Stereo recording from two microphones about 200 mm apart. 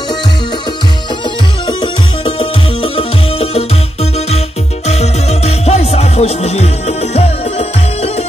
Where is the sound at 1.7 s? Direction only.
25° left (ahead or behind).